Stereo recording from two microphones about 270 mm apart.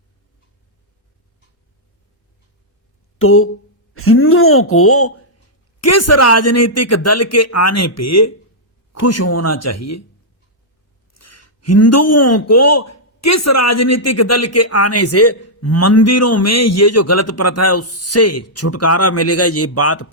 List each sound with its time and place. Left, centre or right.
3.2 s a sound: left
3.9 s a man's voice: left
11.1 s a man's voice: left